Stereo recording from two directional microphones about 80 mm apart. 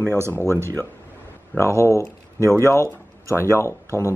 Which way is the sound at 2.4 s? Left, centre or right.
Right.